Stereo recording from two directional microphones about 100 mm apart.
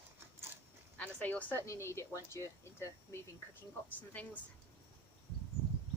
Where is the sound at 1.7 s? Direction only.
30° left (ahead or behind).